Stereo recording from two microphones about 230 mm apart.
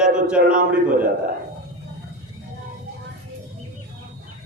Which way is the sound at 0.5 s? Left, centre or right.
Right.